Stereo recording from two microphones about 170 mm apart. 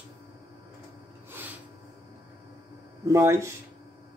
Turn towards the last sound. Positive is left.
turn(degrees=-15)  # may be behind; listen again after turning